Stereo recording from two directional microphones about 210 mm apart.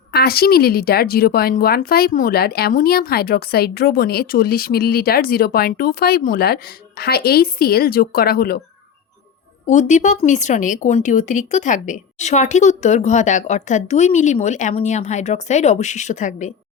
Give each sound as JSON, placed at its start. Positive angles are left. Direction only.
{"t": 0.1, "sound": "a woman's voice", "side_deg": 50}
{"t": 9.6, "sound": "speech", "side_deg": 35}